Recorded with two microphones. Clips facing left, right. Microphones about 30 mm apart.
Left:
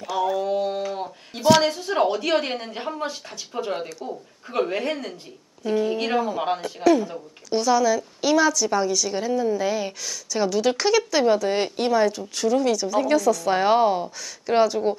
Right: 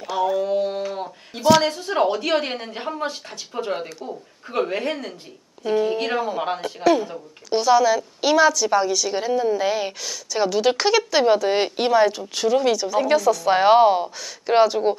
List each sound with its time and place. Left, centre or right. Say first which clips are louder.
0.0 s speech: right 2 dB; centre
13.5 s speech: right 6 dB; right